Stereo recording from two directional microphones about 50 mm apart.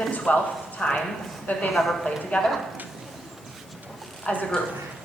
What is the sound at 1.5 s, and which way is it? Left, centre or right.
Speech, left.